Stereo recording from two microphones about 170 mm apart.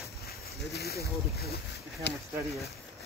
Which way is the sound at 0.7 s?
65° left (ahead or behind).